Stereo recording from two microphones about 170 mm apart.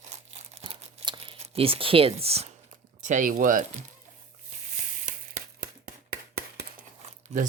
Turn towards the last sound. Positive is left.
turn(degrees=-45)  # may be behind; listen again after turning